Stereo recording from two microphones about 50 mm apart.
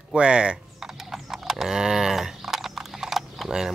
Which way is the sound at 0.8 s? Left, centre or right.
Centre.